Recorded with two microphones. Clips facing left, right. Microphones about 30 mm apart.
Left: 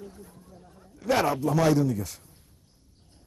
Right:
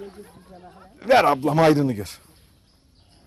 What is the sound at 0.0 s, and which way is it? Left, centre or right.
Speech, right.